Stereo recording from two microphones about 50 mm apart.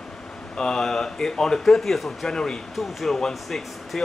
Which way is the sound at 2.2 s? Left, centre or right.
Centre.